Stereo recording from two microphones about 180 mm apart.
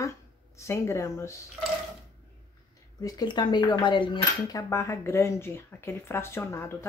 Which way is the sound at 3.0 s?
20° left (ahead or behind).